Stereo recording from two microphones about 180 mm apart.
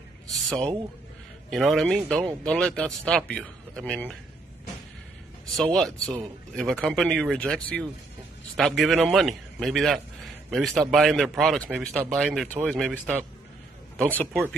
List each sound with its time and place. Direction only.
1.5 s speech: centre (ahead or behind)
5.6 s speech: 5° left (ahead or behind)